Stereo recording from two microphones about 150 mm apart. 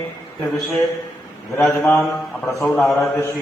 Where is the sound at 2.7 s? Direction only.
Centre (ahead or behind).